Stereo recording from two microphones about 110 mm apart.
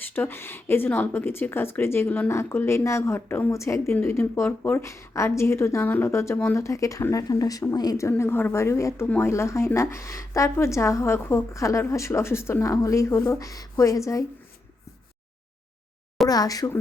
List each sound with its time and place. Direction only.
0.0 s a woman's voice: 20° left (ahead or behind)
8.2 s a woman's voice: 20° left (ahead or behind)
16.3 s speech: 35° left (ahead or behind)